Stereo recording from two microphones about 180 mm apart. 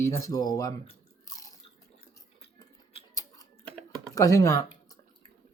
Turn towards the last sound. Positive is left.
turn(degrees=20)  # may be behind; listen again after turning